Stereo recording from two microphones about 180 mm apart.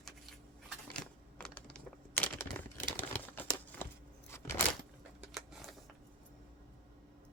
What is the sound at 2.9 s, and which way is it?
Crumpling, 10° left (ahead or behind).